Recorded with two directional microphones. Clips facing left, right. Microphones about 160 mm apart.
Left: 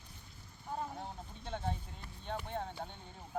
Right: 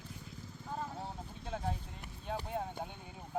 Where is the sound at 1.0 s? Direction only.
5° right (ahead or behind).